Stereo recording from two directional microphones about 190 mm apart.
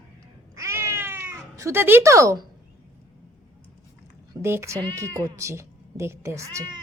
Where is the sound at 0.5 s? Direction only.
15° right (ahead or behind).